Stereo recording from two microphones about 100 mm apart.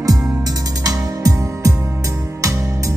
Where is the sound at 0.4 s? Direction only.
40° right (ahead or behind).